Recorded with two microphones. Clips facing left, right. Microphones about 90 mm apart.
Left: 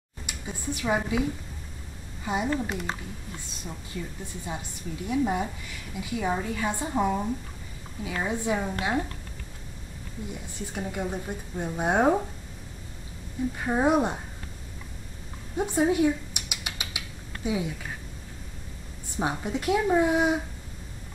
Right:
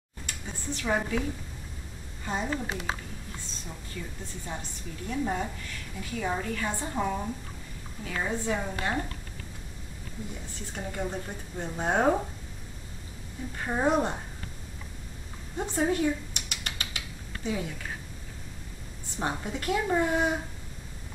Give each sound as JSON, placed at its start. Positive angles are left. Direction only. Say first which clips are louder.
{"t": 0.3, "sound": "a sound", "louder": "left 3 dB", "side_deg": 10}
{"t": 2.2, "sound": "a woman's voice", "louder": "left 4 dB", "side_deg": 10}
{"t": 2.5, "sound": "a woman's voice", "louder": "left 3 dB", "side_deg": -5}
{"t": 3.9, "sound": "a woman's voice", "louder": "left 3 dB", "side_deg": 15}
{"t": 10.7, "sound": "a woman's voice", "louder": "left 2 dB", "side_deg": 5}
{"t": 13.6, "sound": "a woman's voice", "louder": "left 2 dB", "side_deg": 5}
{"t": 15.5, "sound": "rodents", "louder": "left 4 dB", "side_deg": 10}
{"t": 19.3, "sound": "a woman's voice", "louder": "left 5 dB", "side_deg": 5}